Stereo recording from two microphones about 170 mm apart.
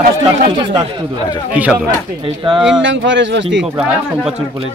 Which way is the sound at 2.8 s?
90° right.